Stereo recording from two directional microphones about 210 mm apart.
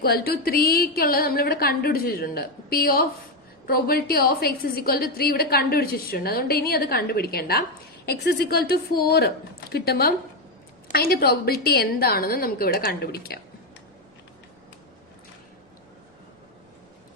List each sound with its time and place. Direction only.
0.0 s a woman's voice: 45° left (ahead or behind)